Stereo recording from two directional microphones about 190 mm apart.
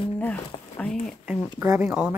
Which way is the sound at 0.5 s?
30° left (ahead or behind).